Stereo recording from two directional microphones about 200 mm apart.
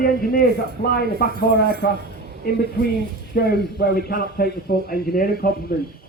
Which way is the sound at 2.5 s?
50° left (ahead or behind).